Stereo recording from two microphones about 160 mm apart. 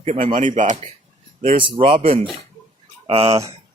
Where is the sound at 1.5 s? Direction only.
30° right (ahead or behind).